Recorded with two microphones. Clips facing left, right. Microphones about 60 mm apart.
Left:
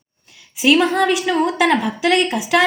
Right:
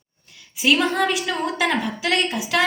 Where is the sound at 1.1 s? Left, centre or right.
Centre.